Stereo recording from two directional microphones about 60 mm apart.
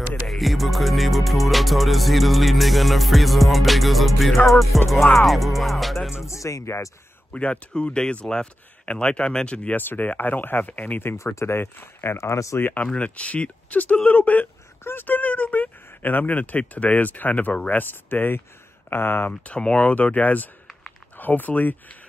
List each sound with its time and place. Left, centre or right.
0.3 s music: centre
6.1 s speech: left
7.3 s speech: centre
9.8 s speech: left
12.5 s speech: left
12.8 s speech: centre
14.8 s speech: left
19.4 s speech: centre